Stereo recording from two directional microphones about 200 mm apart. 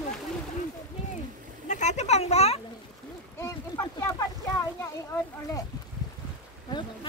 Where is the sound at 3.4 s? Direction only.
15° left (ahead or behind).